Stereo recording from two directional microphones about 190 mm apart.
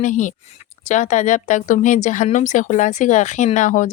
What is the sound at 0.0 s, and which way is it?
Speech, 40° left (ahead or behind).